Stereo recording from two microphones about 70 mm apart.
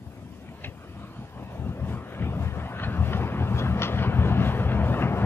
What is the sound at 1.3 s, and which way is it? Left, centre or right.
Vehicle, left.